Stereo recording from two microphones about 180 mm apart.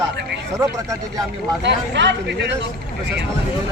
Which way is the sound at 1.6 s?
75° right (ahead or behind).